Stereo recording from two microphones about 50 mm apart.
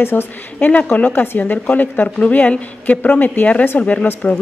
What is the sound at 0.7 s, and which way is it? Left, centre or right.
A woman's voice, left.